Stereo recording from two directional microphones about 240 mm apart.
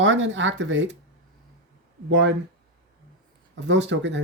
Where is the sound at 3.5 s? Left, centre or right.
Right.